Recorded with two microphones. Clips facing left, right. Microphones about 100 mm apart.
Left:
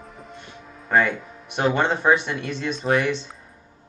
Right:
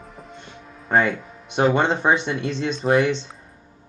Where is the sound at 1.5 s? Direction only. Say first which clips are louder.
Right 2 dB; 20° right (ahead or behind).